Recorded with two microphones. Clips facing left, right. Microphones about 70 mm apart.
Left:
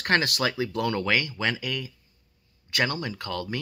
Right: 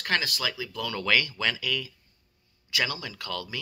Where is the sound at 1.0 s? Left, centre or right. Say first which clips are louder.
Left 1 dB; left.